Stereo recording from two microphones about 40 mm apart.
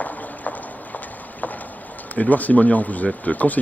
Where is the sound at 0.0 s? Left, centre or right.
Left.